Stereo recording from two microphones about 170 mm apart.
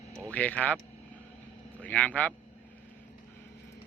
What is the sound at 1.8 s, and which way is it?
Speech, 10° left (ahead or behind).